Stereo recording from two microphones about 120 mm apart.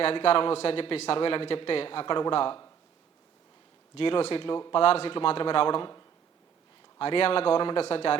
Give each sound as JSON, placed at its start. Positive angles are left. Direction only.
{"t": 0.0, "sound": "a man's voice", "side_deg": 50}
{"t": 3.9, "sound": "a man's voice", "side_deg": 50}
{"t": 4.8, "sound": "a man's voice", "side_deg": 55}
{"t": 7.0, "sound": "a man's voice", "side_deg": 50}